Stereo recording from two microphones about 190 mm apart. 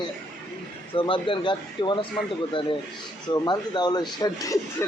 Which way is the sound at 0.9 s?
25° left (ahead or behind).